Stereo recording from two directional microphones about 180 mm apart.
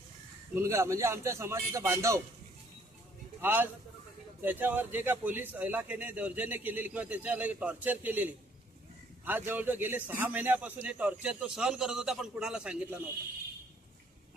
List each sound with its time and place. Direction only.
0.5 s a man's voice: 15° right (ahead or behind)
3.4 s a man's voice: 10° right (ahead or behind)